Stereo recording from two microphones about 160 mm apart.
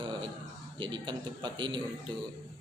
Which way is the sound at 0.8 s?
30° right (ahead or behind).